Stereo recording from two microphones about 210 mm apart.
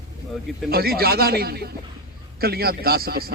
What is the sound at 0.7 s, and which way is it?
A man's voice, 45° right (ahead or behind).